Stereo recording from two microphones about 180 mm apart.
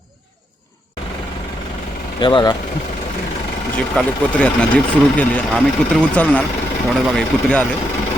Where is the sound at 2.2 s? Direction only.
25° left (ahead or behind).